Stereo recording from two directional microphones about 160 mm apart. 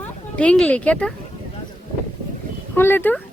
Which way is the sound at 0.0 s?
5° left (ahead or behind).